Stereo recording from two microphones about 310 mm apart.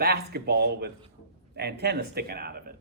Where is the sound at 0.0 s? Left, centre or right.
Right.